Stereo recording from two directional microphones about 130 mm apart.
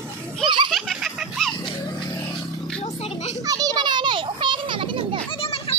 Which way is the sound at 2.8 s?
60° left (ahead or behind).